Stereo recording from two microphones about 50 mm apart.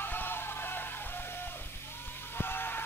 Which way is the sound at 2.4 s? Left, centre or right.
Left.